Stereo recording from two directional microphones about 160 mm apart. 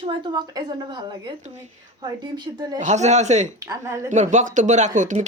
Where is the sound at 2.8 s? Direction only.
45° right (ahead or behind).